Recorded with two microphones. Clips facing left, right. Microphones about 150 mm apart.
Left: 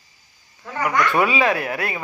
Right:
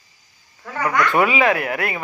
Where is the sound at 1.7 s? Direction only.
20° right (ahead or behind).